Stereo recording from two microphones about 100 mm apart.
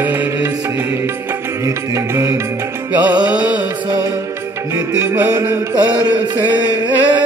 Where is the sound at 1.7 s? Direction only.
30° right (ahead or behind).